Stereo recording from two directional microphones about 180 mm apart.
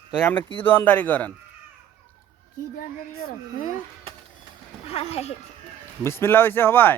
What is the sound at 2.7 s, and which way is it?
Speech, 60° left (ahead or behind).